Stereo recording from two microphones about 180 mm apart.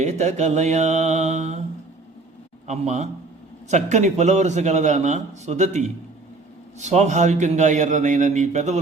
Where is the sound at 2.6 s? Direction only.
40° right (ahead or behind).